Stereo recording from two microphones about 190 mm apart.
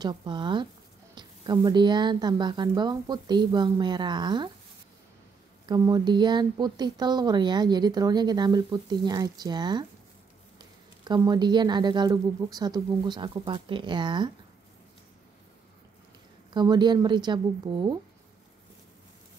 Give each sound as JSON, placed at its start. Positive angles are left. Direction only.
{"t": 0.0, "sound": "speech", "side_deg": -20}
{"t": 5.7, "sound": "speech", "side_deg": -20}
{"t": 11.1, "sound": "speech", "side_deg": -20}
{"t": 16.5, "sound": "speech", "side_deg": -25}